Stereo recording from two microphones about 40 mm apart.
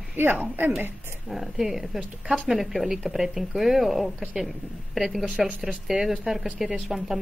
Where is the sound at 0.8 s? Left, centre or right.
Right.